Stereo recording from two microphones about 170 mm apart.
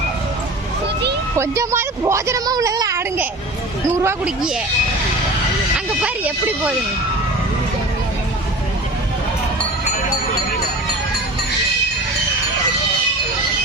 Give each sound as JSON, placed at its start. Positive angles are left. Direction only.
{"t": 1.4, "sound": "a woman's voice", "side_deg": -15}
{"t": 6.0, "sound": "a woman's voice", "side_deg": -10}